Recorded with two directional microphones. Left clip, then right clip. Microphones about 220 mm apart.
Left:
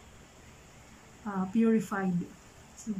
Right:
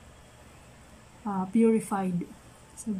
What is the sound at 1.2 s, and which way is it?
Speech, 5° right (ahead or behind).